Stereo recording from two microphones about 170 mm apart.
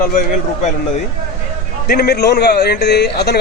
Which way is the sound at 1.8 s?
65° left (ahead or behind).